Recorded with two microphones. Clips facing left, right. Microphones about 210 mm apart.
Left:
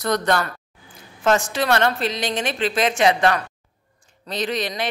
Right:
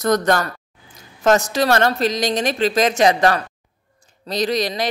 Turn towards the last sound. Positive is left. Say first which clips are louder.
# right 4 dB
turn(degrees=-40)  # may be behind; listen again after turning